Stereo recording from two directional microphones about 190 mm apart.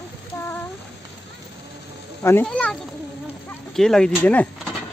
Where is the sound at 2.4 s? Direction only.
5° left (ahead or behind).